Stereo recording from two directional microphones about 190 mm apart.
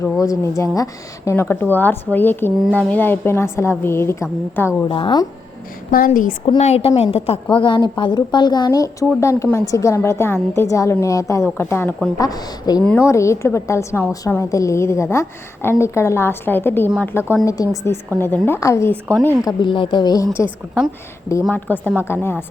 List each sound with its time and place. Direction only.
0.0 s speech: 15° left (ahead or behind)
4.9 s speech: 25° left (ahead or behind)
5.9 s a woman's voice: 45° left (ahead or behind)
6.4 s a woman's voice: 30° left (ahead or behind)
12.8 s speech: 10° left (ahead or behind)
19.5 s speech: 25° left (ahead or behind)
21.5 s speech: 10° left (ahead or behind)